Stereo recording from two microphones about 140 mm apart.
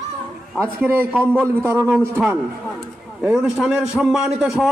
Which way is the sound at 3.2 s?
5° right (ahead or behind).